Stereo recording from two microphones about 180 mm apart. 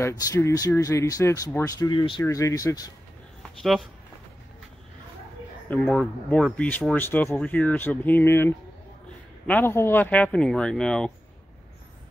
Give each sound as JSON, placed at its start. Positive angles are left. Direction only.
{"t": 0.0, "sound": "speech", "side_deg": 15}
{"t": 5.7, "sound": "speech", "side_deg": 10}